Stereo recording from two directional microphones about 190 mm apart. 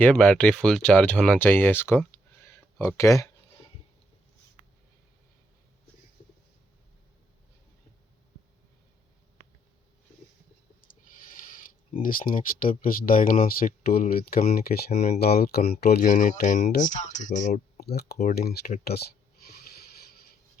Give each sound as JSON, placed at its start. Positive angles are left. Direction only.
{"t": 0.0, "sound": "speech", "side_deg": 5}
{"t": 3.0, "sound": "speech", "side_deg": 15}
{"t": 11.9, "sound": "speech", "side_deg": 50}
{"t": 17.7, "sound": "speech", "side_deg": 55}